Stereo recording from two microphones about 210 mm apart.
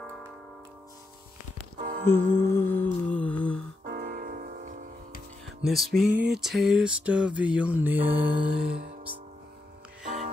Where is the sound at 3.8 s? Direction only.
45° right (ahead or behind).